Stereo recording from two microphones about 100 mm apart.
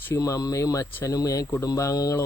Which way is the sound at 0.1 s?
35° left (ahead or behind).